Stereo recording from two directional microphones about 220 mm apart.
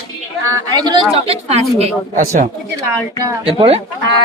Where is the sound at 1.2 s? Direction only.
25° right (ahead or behind).